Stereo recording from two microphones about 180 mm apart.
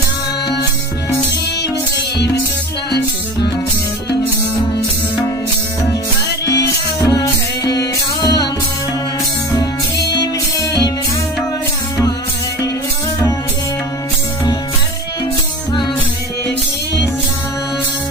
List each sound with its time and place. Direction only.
6.4 s music: 70° left (ahead or behind)
7.0 s music: 20° left (ahead or behind)